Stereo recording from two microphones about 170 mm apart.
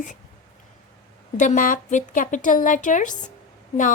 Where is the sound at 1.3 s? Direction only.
50° left (ahead or behind).